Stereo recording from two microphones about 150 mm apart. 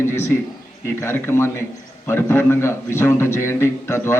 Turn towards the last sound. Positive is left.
turn(degrees=15)  # may be behind; listen again after turning